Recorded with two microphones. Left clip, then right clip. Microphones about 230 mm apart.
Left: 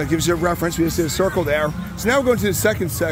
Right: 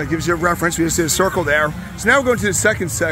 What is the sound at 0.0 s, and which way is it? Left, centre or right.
Speech, centre.